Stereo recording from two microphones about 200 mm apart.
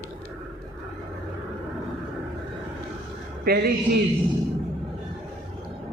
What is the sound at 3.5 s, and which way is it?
Speech, 50° right (ahead or behind).